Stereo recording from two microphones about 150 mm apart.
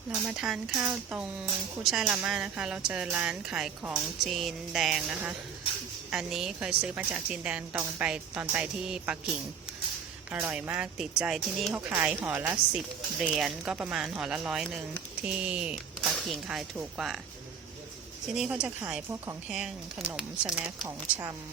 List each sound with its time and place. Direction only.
0.1 s speech: 5° right (ahead or behind)
10.4 s speech: 10° right (ahead or behind)
11.9 s speech: 15° right (ahead or behind)
18.3 s speech: 5° right (ahead or behind)
20.7 s speech: 25° right (ahead or behind)